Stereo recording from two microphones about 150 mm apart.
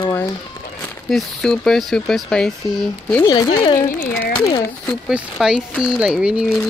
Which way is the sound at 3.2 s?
30° left (ahead or behind).